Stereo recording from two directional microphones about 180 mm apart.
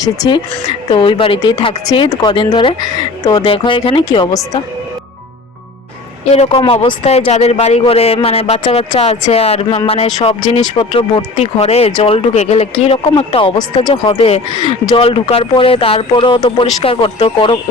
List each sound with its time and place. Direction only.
0.0 s speech: 25° left (ahead or behind)
6.3 s speech: 35° left (ahead or behind)